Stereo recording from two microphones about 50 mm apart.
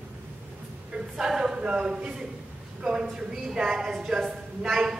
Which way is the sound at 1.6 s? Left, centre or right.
Centre.